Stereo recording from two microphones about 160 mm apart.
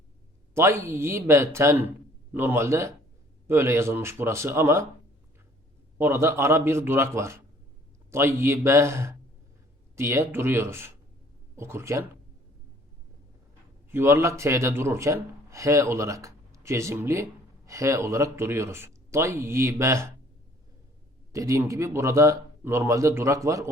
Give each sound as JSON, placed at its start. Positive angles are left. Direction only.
{"t": 0.5, "sound": "speech", "side_deg": -15}
{"t": 6.0, "sound": "speech", "side_deg": -15}
{"t": 13.9, "sound": "speech", "side_deg": -15}
{"t": 21.3, "sound": "speech", "side_deg": -20}